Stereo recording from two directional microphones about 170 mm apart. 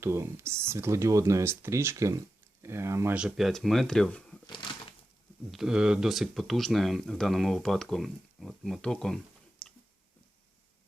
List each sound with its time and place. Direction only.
0.0 s speech: 15° right (ahead or behind); by 4.4 s 5° left (ahead or behind)
5.5 s speech: centre (ahead or behind)